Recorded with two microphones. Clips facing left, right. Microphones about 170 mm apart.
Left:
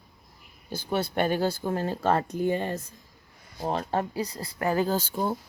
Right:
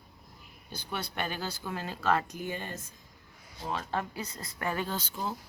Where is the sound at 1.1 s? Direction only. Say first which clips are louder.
Left 12 dB; 45° left (ahead or behind).